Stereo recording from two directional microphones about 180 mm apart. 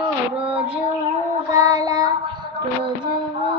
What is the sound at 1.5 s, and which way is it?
Child singing, 20° right (ahead or behind).